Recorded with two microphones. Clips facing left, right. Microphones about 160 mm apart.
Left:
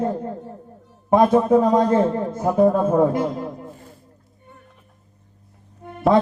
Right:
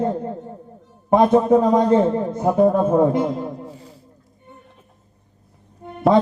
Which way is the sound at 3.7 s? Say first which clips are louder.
Right 2 dB; 50° left (ahead or behind).